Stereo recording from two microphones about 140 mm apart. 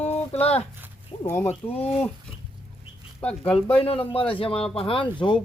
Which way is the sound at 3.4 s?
45° left (ahead or behind).